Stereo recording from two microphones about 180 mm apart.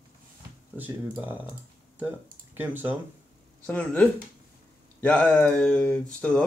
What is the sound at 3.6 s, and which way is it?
Speech, 10° left (ahead or behind).